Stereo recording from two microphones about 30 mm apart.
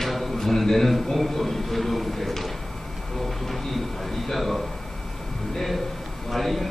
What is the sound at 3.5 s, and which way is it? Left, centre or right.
A man's voice, centre.